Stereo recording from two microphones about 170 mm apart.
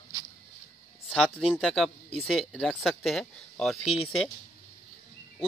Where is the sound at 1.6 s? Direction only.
Centre (ahead or behind).